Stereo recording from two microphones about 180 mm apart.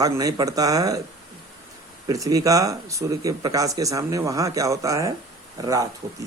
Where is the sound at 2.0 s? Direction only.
20° right (ahead or behind).